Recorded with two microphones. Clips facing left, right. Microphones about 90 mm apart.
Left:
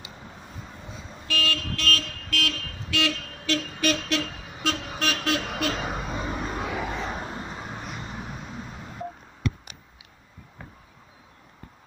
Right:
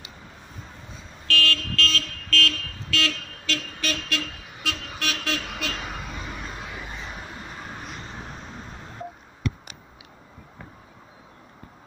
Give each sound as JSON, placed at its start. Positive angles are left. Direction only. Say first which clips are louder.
{"t": 1.2, "sound": "vehicle", "louder": "right 3 dB", "side_deg": 15}
{"t": 6.7, "sound": "vehicle", "louder": "left 7 dB", "side_deg": 85}
{"t": 7.2, "sound": "vehicle", "louder": "left 4 dB", "side_deg": 25}
{"t": 7.6, "sound": "vehicle", "louder": "left 1 dB", "side_deg": 10}